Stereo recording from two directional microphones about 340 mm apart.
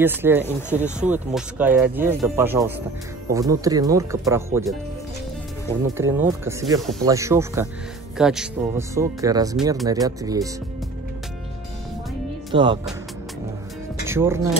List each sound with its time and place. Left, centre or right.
0.0 s speech: centre
5.9 s speech: centre
12.5 s speech: centre
14.0 s speech: centre